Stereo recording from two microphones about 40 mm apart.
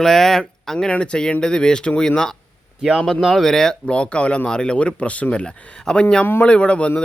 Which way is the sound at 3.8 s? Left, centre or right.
Left.